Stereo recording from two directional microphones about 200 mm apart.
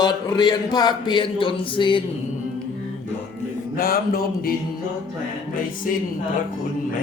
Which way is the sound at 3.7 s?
45° left (ahead or behind).